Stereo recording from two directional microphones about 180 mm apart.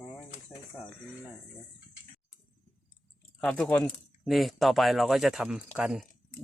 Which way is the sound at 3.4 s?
5° left (ahead or behind).